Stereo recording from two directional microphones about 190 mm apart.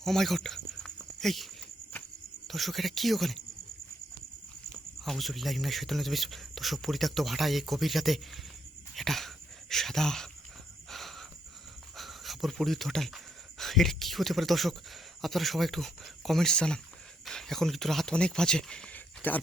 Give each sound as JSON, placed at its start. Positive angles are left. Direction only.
{"t": 0.0, "sound": "speech", "side_deg": 0}
{"t": 2.5, "sound": "speech", "side_deg": 0}
{"t": 4.9, "sound": "speech", "side_deg": 0}
{"t": 10.8, "sound": "a sound", "side_deg": 0}
{"t": 11.9, "sound": "speech", "side_deg": 0}